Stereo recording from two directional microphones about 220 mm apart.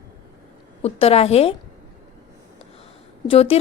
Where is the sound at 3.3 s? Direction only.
25° left (ahead or behind).